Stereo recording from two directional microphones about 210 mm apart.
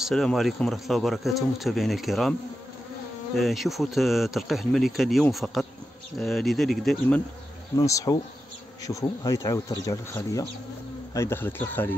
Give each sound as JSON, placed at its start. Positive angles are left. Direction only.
{"t": 0.0, "sound": "speech", "side_deg": 0}
{"t": 3.3, "sound": "speech", "side_deg": 0}
{"t": 7.7, "sound": "speech", "side_deg": 15}